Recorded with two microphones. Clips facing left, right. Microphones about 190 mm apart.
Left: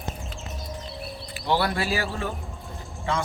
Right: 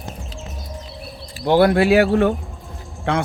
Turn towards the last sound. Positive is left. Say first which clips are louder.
# right 6 dB
turn(degrees=-65)  # may be behind; listen again after turning